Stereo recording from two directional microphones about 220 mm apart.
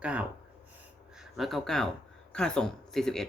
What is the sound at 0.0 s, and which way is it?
Speech, 5° right (ahead or behind).